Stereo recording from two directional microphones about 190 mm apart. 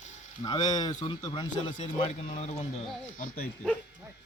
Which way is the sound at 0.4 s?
20° left (ahead or behind).